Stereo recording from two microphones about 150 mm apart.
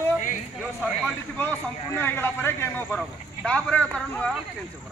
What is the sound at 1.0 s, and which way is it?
A man's voice, 10° left (ahead or behind).